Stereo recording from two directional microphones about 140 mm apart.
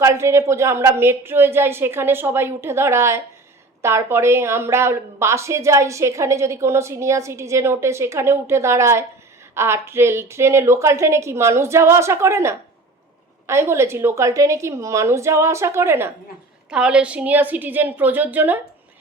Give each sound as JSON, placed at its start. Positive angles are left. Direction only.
{"t": 0.0, "sound": "a woman's voice", "side_deg": -20}
{"t": 16.6, "sound": "a woman's voice", "side_deg": -5}